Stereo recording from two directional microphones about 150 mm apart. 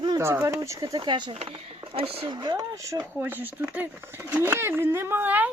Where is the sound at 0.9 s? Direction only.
30° right (ahead or behind).